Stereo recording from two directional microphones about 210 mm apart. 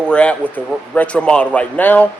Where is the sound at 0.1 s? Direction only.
5° left (ahead or behind).